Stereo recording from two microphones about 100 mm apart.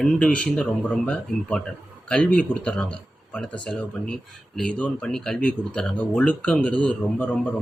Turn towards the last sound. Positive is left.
turn(degrees=15)  # may be behind; listen again after turning